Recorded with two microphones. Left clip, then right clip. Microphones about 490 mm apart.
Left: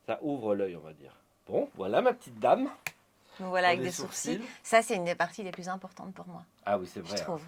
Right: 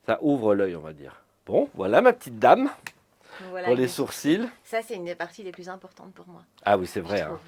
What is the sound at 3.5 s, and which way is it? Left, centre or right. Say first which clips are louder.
Speech: even; left.